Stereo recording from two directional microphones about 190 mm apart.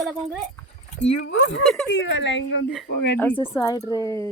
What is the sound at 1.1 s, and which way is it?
Speech, 70° left (ahead or behind).